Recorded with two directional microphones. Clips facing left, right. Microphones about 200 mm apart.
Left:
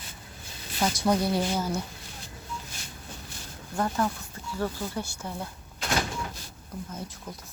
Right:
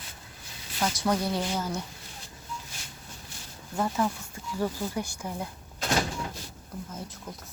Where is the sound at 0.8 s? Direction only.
10° left (ahead or behind).